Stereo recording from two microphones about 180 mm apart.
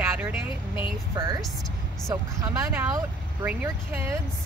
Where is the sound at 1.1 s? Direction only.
25° right (ahead or behind).